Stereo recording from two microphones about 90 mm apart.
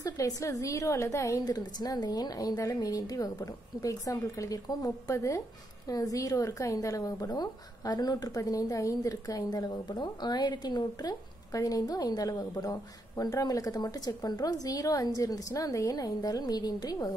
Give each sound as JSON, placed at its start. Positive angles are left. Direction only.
{"t": 0.0, "sound": "a woman's voice", "side_deg": 40}
{"t": 1.4, "sound": "a woman's voice", "side_deg": 50}